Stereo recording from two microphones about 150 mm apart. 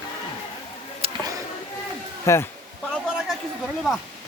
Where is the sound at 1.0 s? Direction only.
40° right (ahead or behind).